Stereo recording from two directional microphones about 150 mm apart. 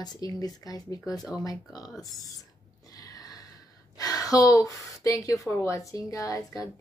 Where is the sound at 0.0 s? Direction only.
25° left (ahead or behind).